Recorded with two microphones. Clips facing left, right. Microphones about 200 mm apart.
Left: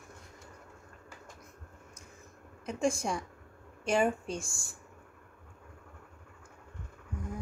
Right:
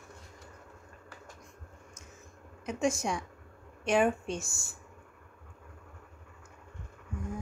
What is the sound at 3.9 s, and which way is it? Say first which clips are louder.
Speech: right 2 dB; centre (ahead or behind).